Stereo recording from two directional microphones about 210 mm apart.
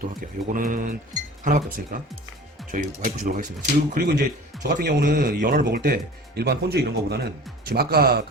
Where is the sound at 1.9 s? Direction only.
45° right (ahead or behind).